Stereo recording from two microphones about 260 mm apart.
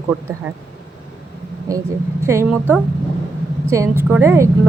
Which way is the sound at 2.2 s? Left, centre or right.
Centre.